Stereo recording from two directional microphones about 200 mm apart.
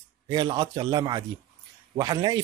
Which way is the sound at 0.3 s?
20° right (ahead or behind).